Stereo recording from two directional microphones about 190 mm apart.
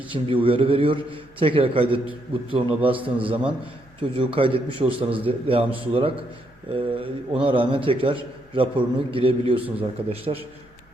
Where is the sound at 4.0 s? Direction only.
25° right (ahead or behind).